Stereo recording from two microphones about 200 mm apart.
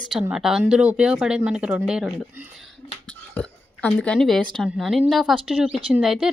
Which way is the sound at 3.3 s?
5° left (ahead or behind).